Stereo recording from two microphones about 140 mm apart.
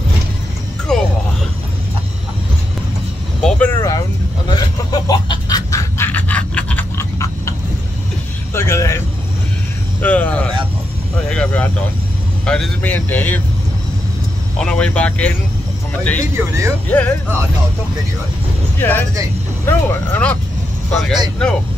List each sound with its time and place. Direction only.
0.9 s vehicle: 5° left (ahead or behind)
3.4 s vehicle: 10° left (ahead or behind)
3.7 s a sound: 25° left (ahead or behind)
8.5 s music: 20° left (ahead or behind)
10.0 s vehicle: 10° left (ahead or behind)
14.6 s speech: 5° left (ahead or behind)
15.9 s a sound: 10° left (ahead or behind)
16.3 s speech: 20° right (ahead or behind)
18.8 s speech: 15° left (ahead or behind)
20.9 s speech: centre (ahead or behind)